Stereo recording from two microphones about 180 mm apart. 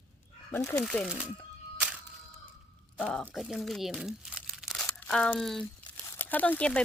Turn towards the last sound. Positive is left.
turn(degrees=5)  # may be behind; listen again after turning